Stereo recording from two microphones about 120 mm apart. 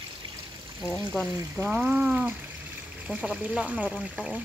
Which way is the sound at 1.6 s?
5° right (ahead or behind).